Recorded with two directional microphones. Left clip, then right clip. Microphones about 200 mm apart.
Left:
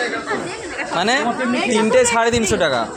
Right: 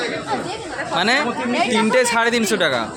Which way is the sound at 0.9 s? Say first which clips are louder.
Even; centre (ahead or behind).